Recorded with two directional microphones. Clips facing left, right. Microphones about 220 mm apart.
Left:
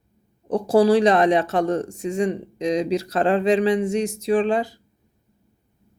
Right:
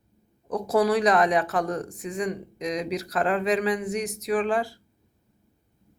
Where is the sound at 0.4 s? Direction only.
30° left (ahead or behind).